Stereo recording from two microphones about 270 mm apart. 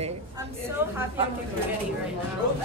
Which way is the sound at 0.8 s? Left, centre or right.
Centre.